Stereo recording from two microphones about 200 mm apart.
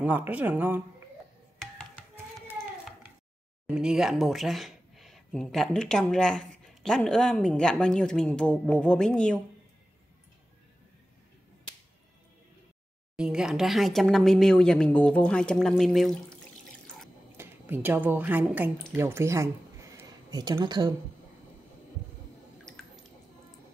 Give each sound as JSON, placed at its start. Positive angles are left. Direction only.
{"t": 0.0, "sound": "speech", "side_deg": -5}
{"t": 3.6, "sound": "speech", "side_deg": -5}
{"t": 13.1, "sound": "speech", "side_deg": -5}
{"t": 17.4, "sound": "a woman's voice", "side_deg": -10}